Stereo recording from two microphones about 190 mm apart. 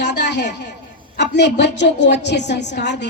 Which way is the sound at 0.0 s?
65° left (ahead or behind).